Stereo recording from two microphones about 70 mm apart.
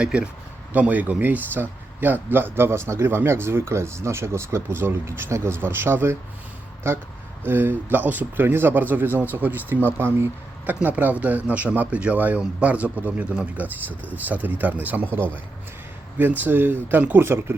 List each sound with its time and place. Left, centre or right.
0.0 s speech: centre; by 10.3 s right
10.8 s speech: right